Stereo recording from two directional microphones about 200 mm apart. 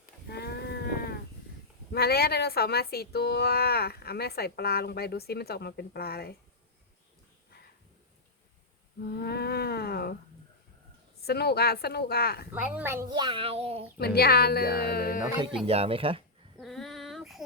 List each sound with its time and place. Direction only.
0.0 s livestock: 55° left (ahead or behind)
1.9 s a woman's voice: 50° left (ahead or behind)
9.0 s a sound: 55° left (ahead or behind)
11.2 s a woman's voice: 50° left (ahead or behind)
12.5 s speech: 10° right (ahead or behind); by 13.8 s 30° right (ahead or behind)
14.0 s a woman's voice: 50° left (ahead or behind)
15.6 s speech: 30° right (ahead or behind)
16.6 s child singing: centre (ahead or behind)